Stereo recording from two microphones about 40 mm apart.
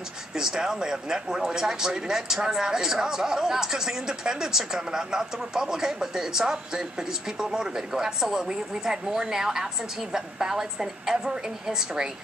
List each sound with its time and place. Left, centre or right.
0.3 s speech: centre